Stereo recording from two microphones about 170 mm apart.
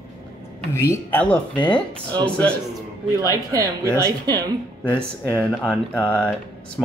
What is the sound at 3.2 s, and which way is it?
Speech, 20° right (ahead or behind).